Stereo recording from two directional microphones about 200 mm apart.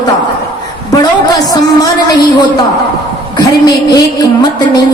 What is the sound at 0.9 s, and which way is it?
Speech, 20° left (ahead or behind).